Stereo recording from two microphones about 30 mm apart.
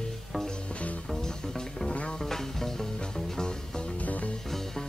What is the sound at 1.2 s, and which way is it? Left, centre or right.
Music, centre.